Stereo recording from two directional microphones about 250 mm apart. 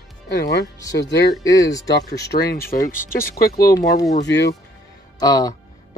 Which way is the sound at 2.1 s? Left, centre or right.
Left.